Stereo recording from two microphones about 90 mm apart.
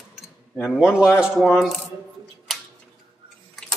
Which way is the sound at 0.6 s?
5° right (ahead or behind).